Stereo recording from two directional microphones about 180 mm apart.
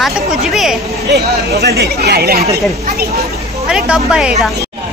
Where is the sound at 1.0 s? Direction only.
65° right (ahead or behind).